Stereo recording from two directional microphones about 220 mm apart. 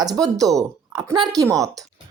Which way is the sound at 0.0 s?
15° right (ahead or behind).